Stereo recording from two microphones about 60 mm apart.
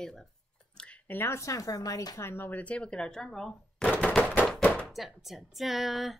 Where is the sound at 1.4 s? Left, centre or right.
Left.